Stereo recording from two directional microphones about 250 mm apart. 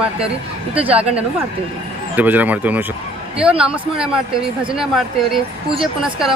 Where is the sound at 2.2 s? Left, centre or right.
Centre.